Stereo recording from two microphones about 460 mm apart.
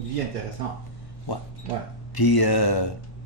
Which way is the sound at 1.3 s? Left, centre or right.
Left.